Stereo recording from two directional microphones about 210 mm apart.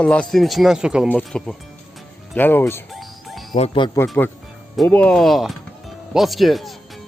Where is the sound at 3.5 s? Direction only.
30° left (ahead or behind).